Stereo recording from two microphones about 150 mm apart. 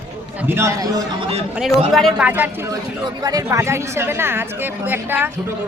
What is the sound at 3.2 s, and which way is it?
A man's voice, 20° right (ahead or behind).